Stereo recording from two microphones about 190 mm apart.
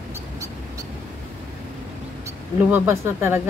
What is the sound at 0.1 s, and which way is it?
Vehicle, 15° right (ahead or behind).